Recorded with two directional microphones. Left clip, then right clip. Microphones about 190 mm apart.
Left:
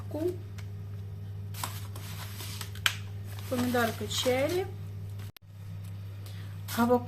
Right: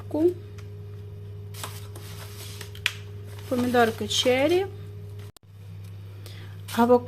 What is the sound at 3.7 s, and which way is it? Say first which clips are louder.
Speech: right 9 dB; 45° right (ahead or behind).